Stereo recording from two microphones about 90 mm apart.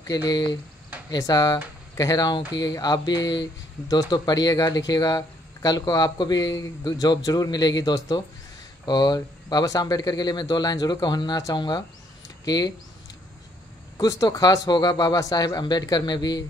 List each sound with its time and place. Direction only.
0.0 s speech: 45° left (ahead or behind)
13.9 s speech: 40° left (ahead or behind)